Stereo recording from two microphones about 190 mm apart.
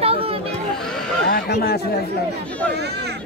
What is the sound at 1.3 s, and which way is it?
Speech, 55° left (ahead or behind).